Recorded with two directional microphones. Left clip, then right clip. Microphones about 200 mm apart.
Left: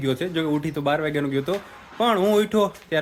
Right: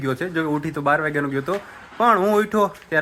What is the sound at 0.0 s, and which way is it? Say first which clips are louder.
Speech: right 1 dB; centre (ahead or behind).